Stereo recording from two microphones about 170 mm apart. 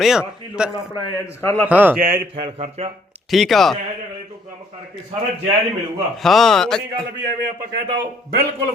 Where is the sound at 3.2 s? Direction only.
Centre (ahead or behind).